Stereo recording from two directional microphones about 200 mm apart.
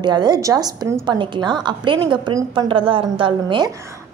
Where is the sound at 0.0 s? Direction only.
20° right (ahead or behind).